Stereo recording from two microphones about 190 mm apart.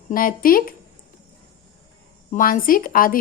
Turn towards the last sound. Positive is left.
turn(degrees=50)  # may be behind; listen again after turning